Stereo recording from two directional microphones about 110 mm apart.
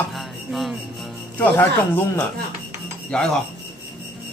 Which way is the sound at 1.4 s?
20° left (ahead or behind).